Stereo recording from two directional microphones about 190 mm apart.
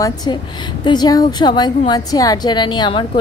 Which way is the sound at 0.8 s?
20° left (ahead or behind).